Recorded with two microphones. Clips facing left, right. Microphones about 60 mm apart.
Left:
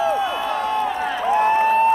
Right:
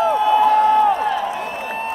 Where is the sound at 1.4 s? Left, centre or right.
Left.